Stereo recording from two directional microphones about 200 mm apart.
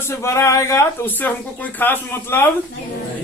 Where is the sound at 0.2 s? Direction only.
15° left (ahead or behind).